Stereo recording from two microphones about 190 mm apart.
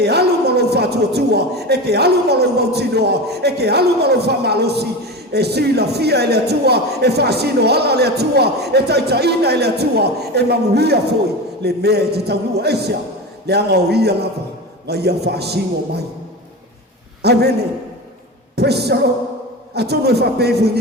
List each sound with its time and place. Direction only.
0.0 s a man's voice: 60° right (ahead or behind)
17.2 s a man's voice: 60° right (ahead or behind)
18.5 s a man's voice: 60° right (ahead or behind)